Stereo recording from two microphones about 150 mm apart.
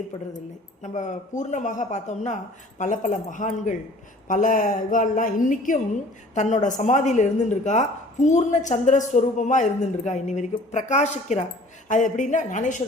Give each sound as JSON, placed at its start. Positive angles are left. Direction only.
{"t": 0.8, "sound": "a woman's voice", "side_deg": 55}
{"t": 11.9, "sound": "speech", "side_deg": 55}